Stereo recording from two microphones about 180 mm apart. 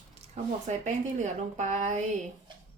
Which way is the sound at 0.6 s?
40° right (ahead or behind).